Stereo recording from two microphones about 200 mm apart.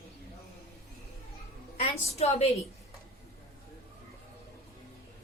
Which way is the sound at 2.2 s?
30° left (ahead or behind).